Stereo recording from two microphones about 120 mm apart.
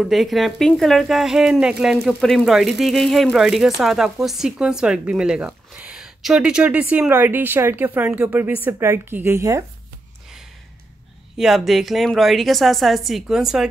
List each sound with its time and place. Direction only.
0.0 s a woman's voice: centre (ahead or behind); by 9.7 s 25° right (ahead or behind)
11.3 s speech: centre (ahead or behind)